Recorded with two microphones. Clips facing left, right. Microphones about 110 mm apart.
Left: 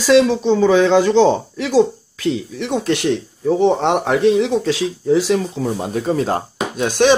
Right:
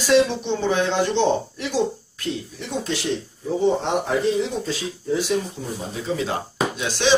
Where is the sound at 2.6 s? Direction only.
70° left (ahead or behind).